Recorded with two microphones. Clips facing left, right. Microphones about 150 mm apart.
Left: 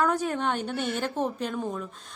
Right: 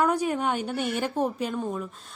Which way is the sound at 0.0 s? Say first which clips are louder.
Right 2 dB; 10° right (ahead or behind).